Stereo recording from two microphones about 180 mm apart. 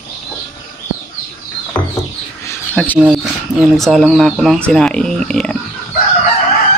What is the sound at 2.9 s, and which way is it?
Speech, 5° right (ahead or behind).